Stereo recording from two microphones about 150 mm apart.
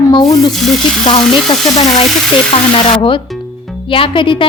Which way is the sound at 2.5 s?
35° left (ahead or behind).